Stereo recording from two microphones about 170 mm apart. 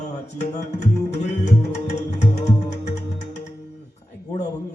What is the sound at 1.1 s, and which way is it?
Music, 40° left (ahead or behind).